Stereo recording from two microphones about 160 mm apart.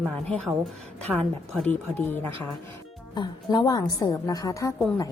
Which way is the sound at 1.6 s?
10° left (ahead or behind).